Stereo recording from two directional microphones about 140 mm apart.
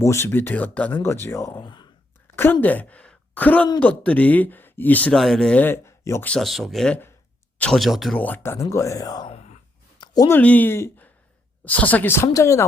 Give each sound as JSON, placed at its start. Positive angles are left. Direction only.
{"t": 0.0, "sound": "speech", "side_deg": 20}
{"t": 1.6, "sound": "speech", "side_deg": 30}
{"t": 2.3, "sound": "a woman's voice", "side_deg": 15}
{"t": 6.3, "sound": "speech", "side_deg": 0}
{"t": 8.2, "sound": "speech", "side_deg": 15}
{"t": 9.3, "sound": "gasp", "side_deg": 50}
{"t": 10.2, "sound": "speech", "side_deg": 10}